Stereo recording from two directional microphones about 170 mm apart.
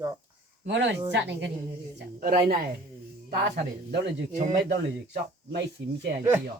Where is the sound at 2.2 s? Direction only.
65° right (ahead or behind).